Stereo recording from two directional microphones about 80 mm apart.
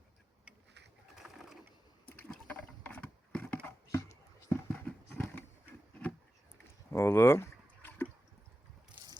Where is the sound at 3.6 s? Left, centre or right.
Left.